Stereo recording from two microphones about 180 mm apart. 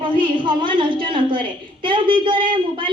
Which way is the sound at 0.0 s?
25° right (ahead or behind).